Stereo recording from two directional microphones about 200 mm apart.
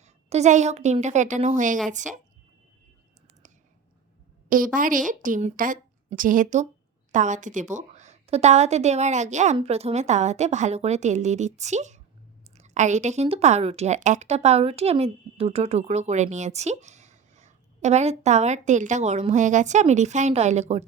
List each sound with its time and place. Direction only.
0.0 s a woman's voice: 35° right (ahead or behind)
4.4 s a woman's voice: 45° right (ahead or behind)